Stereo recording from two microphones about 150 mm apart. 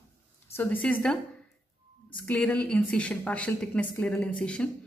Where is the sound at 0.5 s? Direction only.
10° left (ahead or behind).